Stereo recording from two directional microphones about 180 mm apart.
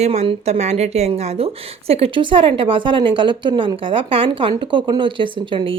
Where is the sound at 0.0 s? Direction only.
35° right (ahead or behind).